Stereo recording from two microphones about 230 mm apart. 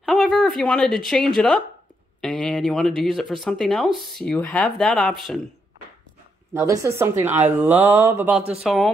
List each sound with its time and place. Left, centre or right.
0.0 s a woman's voice: centre
6.5 s mantra: centre
8.4 s speech: right
8.6 s speech: centre